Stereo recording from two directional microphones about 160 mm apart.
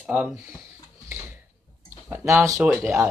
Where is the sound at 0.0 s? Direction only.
10° right (ahead or behind).